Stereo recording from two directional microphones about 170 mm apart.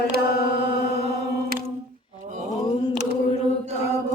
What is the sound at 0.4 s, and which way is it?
Mantra, 70° left (ahead or behind).